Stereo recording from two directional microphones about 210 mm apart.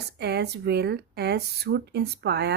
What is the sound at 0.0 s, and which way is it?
Speech, 50° right (ahead or behind).